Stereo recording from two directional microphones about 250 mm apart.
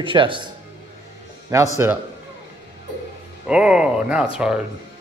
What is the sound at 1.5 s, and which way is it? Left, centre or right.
Speech, centre.